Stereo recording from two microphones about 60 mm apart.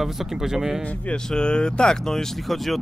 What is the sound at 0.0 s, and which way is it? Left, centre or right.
Speech, centre.